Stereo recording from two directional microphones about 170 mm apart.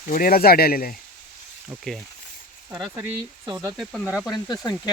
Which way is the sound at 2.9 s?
20° right (ahead or behind).